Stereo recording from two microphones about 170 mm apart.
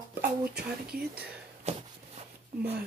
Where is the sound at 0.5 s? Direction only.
65° right (ahead or behind).